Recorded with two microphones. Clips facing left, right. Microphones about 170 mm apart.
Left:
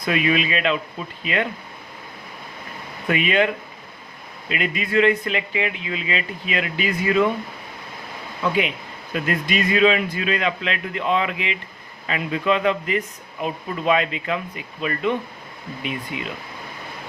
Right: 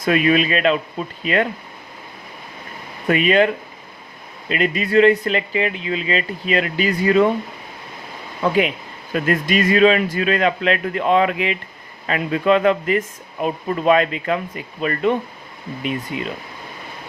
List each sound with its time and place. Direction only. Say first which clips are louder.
0.0 s speech: right 5 dB; 45° right (ahead or behind)
3.1 s speech: right 4 dB; 40° right (ahead or behind)
8.4 s speech: right 4 dB; 45° right (ahead or behind)
16.1 s speech: right 4 dB; 40° right (ahead or behind)